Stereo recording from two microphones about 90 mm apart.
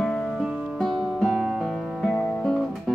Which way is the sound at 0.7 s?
5° left (ahead or behind).